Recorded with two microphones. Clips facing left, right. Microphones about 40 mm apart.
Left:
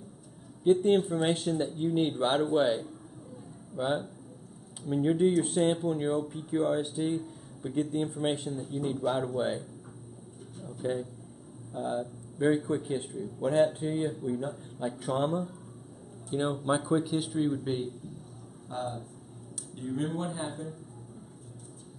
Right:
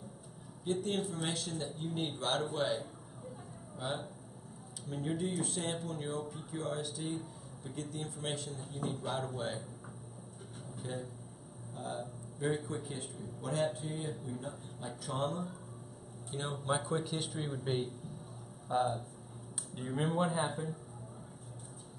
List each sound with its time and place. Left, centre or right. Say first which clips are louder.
0.7 s speech: left 12 dB; left
8.6 s a man's voice: left 9 dB; centre
10.8 s speech: left 11 dB; left
15.1 s a man's voice: left 5 dB; left; by 20.7 s centre